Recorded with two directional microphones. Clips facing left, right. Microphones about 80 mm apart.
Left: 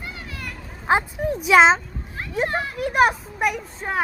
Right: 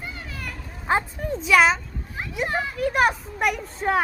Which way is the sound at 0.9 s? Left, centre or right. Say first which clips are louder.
Left 3 dB; centre.